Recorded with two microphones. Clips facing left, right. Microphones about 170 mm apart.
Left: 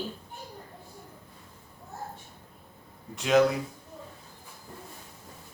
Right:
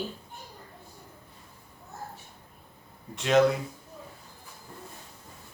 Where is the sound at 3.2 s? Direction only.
Centre (ahead or behind).